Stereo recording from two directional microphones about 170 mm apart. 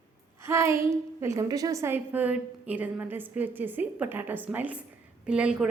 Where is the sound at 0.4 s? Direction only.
15° right (ahead or behind).